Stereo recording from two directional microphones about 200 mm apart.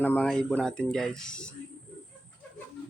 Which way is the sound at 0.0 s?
10° left (ahead or behind).